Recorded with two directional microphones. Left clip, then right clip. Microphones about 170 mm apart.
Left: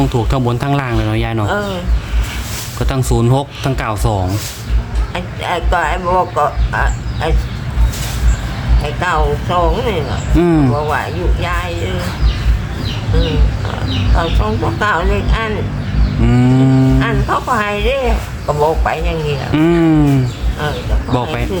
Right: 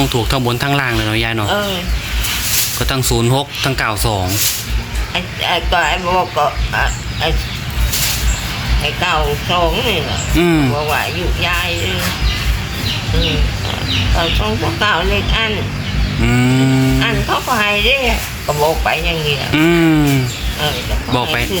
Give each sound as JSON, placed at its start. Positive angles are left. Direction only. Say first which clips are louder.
{"t": 0.0, "sound": "speech", "louder": "right 1 dB", "side_deg": 10}
{"t": 2.7, "sound": "speech", "louder": "right 1 dB", "side_deg": 10}
{"t": 8.8, "sound": "speech", "louder": "even", "side_deg": 5}
{"t": 10.4, "sound": "speech", "louder": "left 1 dB", "side_deg": 20}
{"t": 10.7, "sound": "speech", "louder": "even", "side_deg": 5}
{"t": 14.2, "sound": "speech", "louder": "left 2 dB", "side_deg": 5}
{"t": 16.2, "sound": "livestock", "louder": "left 1 dB", "side_deg": 15}
{"t": 16.6, "sound": "speech", "louder": "even", "side_deg": 5}